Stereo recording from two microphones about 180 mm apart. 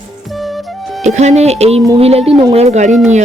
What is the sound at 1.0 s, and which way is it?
Speech, 40° right (ahead or behind).